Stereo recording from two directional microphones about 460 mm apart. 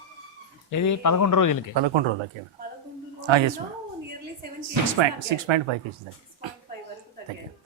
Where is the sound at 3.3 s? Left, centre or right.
Right.